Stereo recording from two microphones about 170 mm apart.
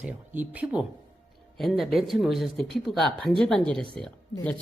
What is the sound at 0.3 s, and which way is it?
Speech, 10° right (ahead or behind).